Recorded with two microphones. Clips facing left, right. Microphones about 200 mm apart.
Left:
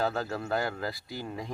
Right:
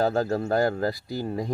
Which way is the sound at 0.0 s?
40° right (ahead or behind).